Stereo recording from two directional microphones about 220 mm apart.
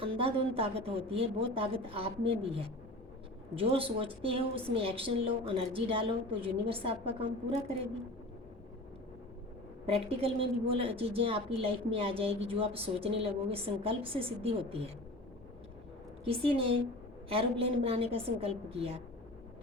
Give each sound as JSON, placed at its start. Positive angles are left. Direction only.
{"t": 0.0, "sound": "a woman's voice", "side_deg": -25}
{"t": 9.8, "sound": "a woman's voice", "side_deg": -25}
{"t": 16.2, "sound": "a woman's voice", "side_deg": -25}